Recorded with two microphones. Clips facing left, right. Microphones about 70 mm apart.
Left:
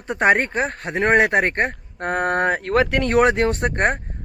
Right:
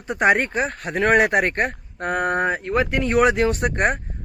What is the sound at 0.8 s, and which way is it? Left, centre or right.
Speech, left.